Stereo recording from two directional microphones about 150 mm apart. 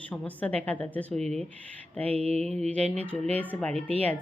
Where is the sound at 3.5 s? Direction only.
10° left (ahead or behind).